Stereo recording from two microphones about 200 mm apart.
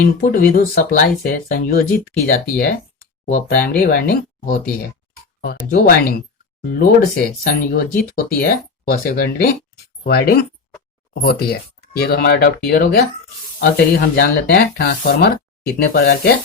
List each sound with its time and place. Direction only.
0.0 s speech: 45° left (ahead or behind)